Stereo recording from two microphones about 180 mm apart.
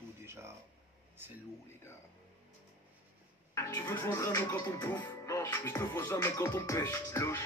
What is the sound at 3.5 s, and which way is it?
Speech, 15° left (ahead or behind).